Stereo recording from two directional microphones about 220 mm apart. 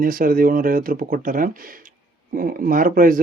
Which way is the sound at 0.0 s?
40° right (ahead or behind).